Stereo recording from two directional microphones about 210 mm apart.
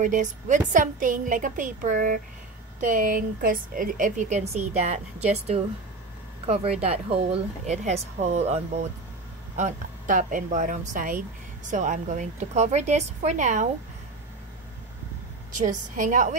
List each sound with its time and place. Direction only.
0.0 s speech: 35° right (ahead or behind)
15.5 s speech: 40° right (ahead or behind)